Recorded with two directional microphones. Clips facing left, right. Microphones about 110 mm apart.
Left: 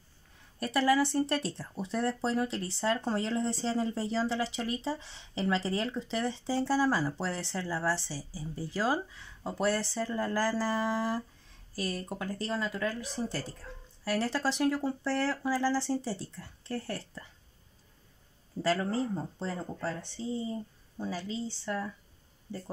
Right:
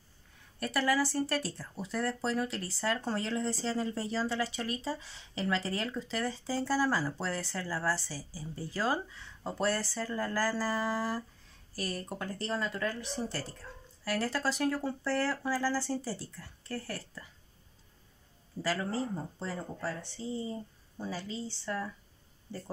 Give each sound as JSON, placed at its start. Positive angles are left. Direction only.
{"t": 0.6, "sound": "speech", "side_deg": 30}
{"t": 14.0, "sound": "speech", "side_deg": 20}
{"t": 18.6, "sound": "speech", "side_deg": 25}